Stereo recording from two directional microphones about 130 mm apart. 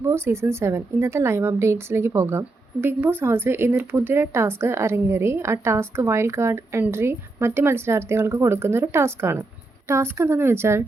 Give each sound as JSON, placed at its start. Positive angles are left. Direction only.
{"t": 0.0, "sound": "a woman's voice", "side_deg": -20}